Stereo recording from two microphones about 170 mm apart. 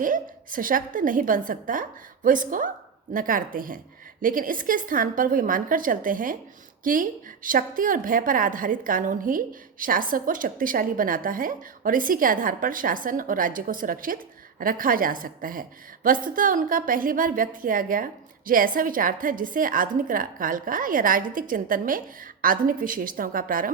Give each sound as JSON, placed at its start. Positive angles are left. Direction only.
{"t": 0.0, "sound": "a woman's voice", "side_deg": -50}